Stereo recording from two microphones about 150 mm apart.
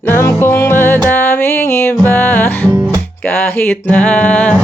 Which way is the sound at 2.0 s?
10° left (ahead or behind).